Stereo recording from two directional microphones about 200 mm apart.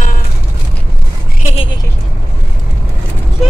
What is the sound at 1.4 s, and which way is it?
Speech, 30° left (ahead or behind).